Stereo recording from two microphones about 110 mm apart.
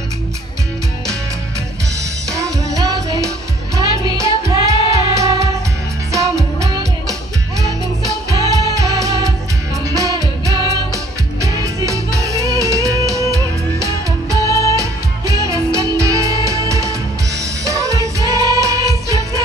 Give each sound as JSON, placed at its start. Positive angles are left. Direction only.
{"t": 2.3, "sound": "music", "side_deg": -30}
{"t": 7.6, "sound": "music", "side_deg": -30}
{"t": 14.5, "sound": "music", "side_deg": 30}
{"t": 14.8, "sound": "music", "side_deg": -30}